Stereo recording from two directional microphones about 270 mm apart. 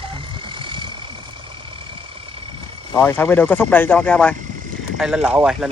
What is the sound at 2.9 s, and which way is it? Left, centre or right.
Speech, centre.